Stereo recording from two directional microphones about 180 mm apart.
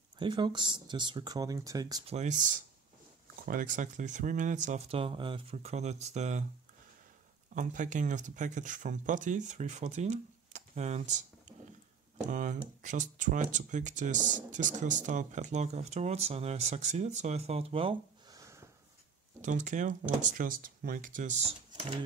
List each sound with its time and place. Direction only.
0.2 s speech: 25° right (ahead or behind)
2.0 s speech: 40° right (ahead or behind)
7.5 s speech: 45° right (ahead or behind)
18.4 s a sound: 15° right (ahead or behind)
19.4 s speech: 45° right (ahead or behind)